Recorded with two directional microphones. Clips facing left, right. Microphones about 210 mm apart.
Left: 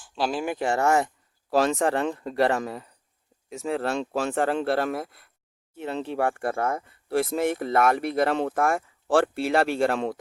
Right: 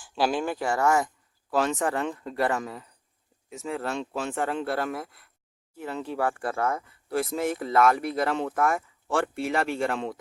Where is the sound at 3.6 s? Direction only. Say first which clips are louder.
Left 4 dB; 70° left (ahead or behind).